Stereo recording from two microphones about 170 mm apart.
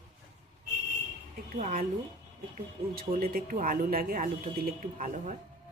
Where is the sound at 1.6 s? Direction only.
45° right (ahead or behind).